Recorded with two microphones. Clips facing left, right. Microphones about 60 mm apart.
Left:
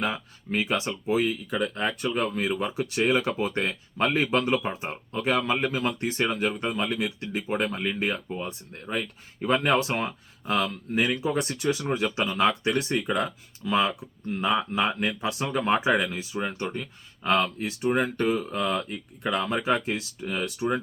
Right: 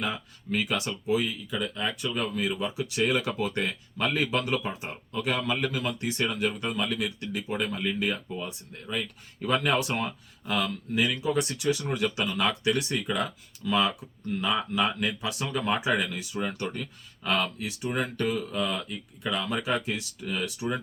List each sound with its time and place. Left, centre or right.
0.0 s speech: left
1.1 s speech: left
7.4 s speech: left; by 16.9 s centre
17.2 s speech: left